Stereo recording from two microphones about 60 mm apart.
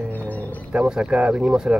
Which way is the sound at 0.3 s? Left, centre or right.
Left.